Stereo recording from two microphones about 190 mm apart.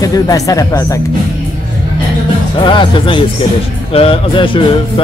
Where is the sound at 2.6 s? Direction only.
25° left (ahead or behind).